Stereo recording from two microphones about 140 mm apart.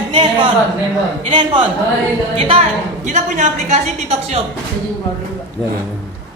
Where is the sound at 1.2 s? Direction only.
35° right (ahead or behind).